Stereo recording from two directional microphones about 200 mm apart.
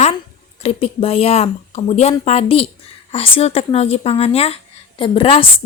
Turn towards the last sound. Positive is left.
turn(degrees=30)  # may be behind; listen again after turning